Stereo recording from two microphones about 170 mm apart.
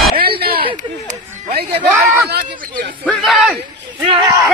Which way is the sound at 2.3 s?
65° right (ahead or behind).